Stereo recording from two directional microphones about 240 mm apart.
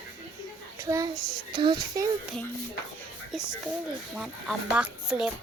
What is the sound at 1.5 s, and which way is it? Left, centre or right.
Speech, centre.